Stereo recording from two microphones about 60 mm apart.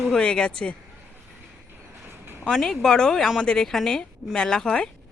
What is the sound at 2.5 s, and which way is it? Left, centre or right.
A woman's voice, centre.